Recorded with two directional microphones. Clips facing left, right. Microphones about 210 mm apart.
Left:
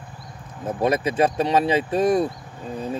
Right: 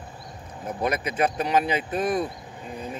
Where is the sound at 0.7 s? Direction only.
25° left (ahead or behind).